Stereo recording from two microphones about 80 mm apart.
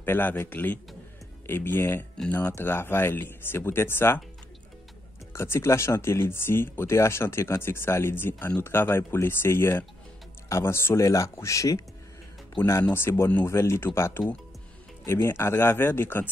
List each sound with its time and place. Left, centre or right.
0.0 s speech: left
2.5 s speech: left
5.3 s speech: left